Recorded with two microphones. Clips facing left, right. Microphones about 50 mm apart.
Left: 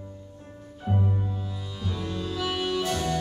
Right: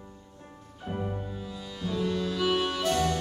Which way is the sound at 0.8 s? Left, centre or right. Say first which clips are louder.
Left 5 dB; centre.